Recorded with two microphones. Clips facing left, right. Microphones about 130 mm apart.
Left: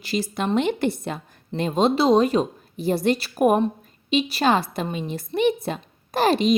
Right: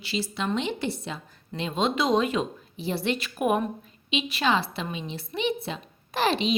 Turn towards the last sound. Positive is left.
turn(degrees=45)  # may be behind; listen again after turning